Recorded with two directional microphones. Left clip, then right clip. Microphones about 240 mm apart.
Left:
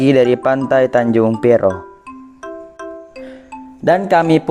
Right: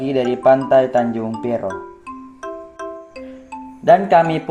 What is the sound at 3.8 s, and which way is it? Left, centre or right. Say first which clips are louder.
Speech: right 1 dB; left.